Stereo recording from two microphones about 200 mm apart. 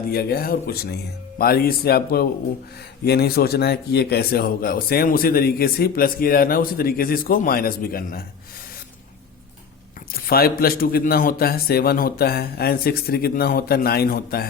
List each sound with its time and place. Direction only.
0.1 s a man's voice: 50° left (ahead or behind)
10.1 s a man's voice: 50° left (ahead or behind)